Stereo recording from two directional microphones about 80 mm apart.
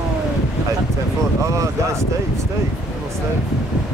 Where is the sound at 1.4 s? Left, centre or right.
Right.